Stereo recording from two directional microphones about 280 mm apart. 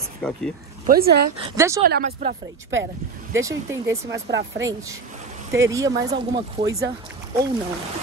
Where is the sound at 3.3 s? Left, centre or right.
Centre.